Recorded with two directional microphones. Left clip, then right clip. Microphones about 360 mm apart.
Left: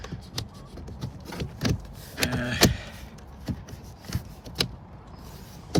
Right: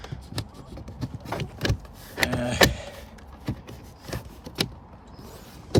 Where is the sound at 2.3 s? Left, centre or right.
Centre.